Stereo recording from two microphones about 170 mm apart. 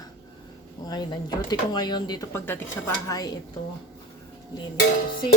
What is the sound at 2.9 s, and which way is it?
Speech, 20° left (ahead or behind).